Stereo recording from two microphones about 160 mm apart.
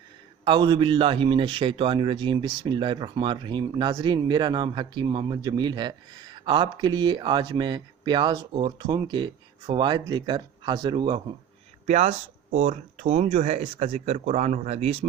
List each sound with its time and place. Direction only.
0.4 s a man's voice: 30° right (ahead or behind)
11.9 s speech: 45° right (ahead or behind)